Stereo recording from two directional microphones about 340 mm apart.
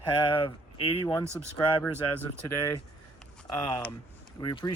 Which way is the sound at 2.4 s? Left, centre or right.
Centre.